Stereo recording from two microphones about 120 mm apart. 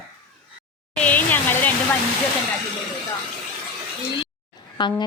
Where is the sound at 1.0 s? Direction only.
15° left (ahead or behind).